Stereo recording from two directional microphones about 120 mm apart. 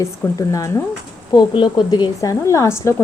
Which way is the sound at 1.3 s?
40° left (ahead or behind).